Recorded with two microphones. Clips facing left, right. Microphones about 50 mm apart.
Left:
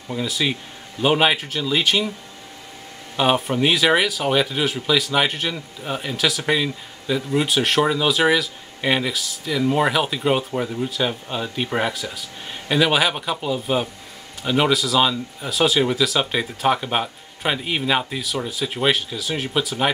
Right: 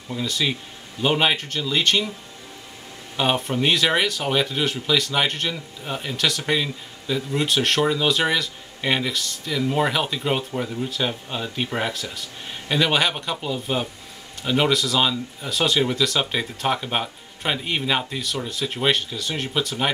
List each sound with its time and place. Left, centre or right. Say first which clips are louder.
0.1 s speech: left 2 dB; centre
3.2 s speech: left 3 dB; centre